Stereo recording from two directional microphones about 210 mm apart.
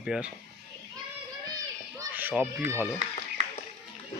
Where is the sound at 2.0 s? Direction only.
10° right (ahead or behind).